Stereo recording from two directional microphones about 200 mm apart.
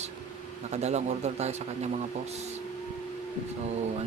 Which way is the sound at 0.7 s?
35° right (ahead or behind).